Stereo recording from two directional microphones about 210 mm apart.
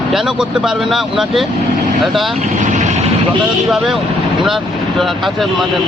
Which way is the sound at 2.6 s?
35° right (ahead or behind).